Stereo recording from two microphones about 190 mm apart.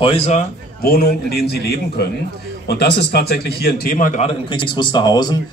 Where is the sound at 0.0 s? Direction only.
30° left (ahead or behind).